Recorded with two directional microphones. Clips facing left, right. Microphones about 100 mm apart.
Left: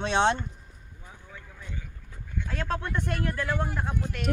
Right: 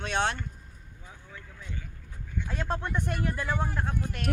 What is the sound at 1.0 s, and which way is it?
Vehicle, 5° left (ahead or behind).